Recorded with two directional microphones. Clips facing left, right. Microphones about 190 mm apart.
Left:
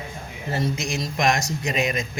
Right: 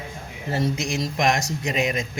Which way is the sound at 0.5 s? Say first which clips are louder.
Right 2 dB; 30° right (ahead or behind).